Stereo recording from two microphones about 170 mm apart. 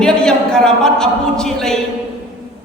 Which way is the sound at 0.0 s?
5° left (ahead or behind).